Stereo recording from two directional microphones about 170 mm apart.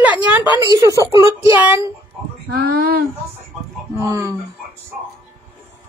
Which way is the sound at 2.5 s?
60° right (ahead or behind).